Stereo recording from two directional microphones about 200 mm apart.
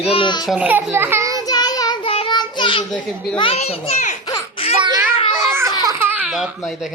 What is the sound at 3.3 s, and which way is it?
Speech, 25° left (ahead or behind).